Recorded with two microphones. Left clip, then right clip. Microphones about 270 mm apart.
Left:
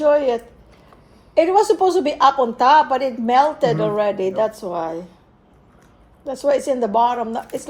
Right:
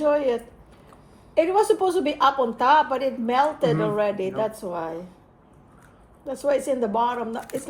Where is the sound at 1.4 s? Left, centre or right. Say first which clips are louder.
Left 5 dB; left.